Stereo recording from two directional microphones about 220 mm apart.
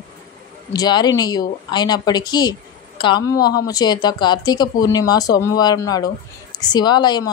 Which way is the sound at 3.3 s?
45° left (ahead or behind).